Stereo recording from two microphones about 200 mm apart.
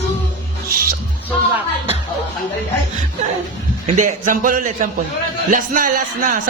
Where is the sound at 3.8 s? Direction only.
40° right (ahead or behind).